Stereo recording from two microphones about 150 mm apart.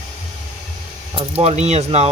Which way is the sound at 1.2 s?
40° right (ahead or behind).